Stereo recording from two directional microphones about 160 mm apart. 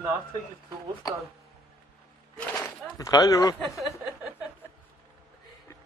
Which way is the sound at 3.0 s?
20° left (ahead or behind).